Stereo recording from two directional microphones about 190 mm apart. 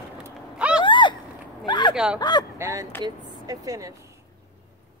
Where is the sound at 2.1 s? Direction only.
20° left (ahead or behind).